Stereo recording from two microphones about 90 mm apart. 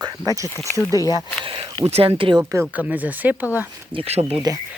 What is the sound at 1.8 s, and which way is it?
Speech, 85° right.